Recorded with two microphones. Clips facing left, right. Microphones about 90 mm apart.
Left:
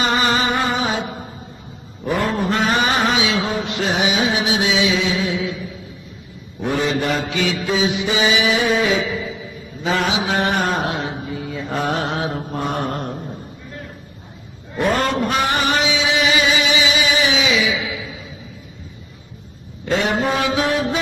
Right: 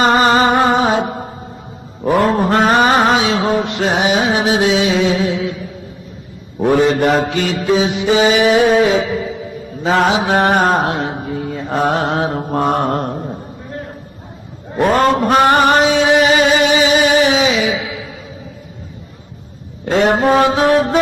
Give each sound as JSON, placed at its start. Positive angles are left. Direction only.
{"t": 0.0, "sound": "music", "side_deg": -40}
{"t": 2.0, "sound": "mantra", "side_deg": -60}
{"t": 2.3, "sound": "music", "side_deg": -50}
{"t": 6.7, "sound": "mantra", "side_deg": -50}
{"t": 14.8, "sound": "a sound", "side_deg": -50}
{"t": 19.8, "sound": "music", "side_deg": -45}